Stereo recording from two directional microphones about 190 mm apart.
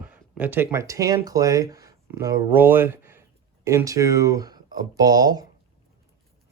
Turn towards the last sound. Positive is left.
turn(degrees=-20)  # may be behind; listen again after turning